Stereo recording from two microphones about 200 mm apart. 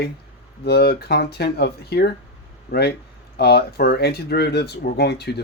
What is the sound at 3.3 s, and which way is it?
Speech, 55° left (ahead or behind).